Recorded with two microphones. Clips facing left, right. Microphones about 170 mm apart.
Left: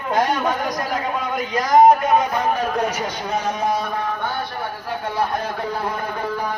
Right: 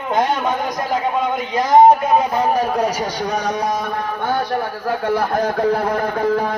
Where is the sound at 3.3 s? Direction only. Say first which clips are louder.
Even; 75° right (ahead or behind).